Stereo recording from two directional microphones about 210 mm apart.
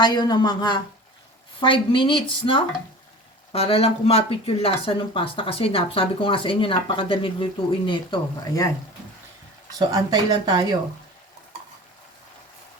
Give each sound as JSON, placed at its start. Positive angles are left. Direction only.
{"t": 0.0, "sound": "speech", "side_deg": 20}
{"t": 9.7, "sound": "speech", "side_deg": -20}